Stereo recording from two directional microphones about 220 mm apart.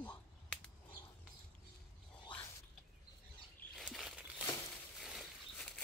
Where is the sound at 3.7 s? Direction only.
Centre (ahead or behind).